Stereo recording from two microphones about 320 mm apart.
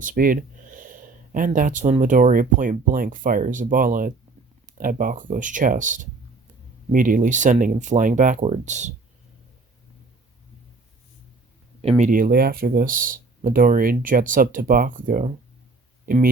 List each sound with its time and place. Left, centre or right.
0.0 s speech: right
11.8 s speech: centre